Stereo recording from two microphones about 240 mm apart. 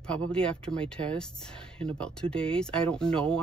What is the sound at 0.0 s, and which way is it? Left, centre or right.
Speech, centre.